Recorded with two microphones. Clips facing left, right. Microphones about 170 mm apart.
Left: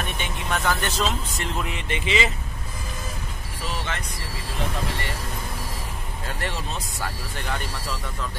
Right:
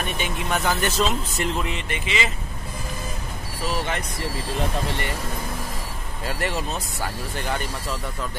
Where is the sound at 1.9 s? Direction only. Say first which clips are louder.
Left 2 dB; 30° left (ahead or behind).